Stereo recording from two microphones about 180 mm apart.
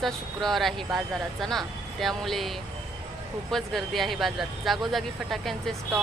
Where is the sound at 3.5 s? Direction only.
Centre (ahead or behind).